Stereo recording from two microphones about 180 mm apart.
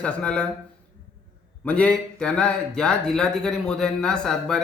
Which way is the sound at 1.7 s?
5° left (ahead or behind).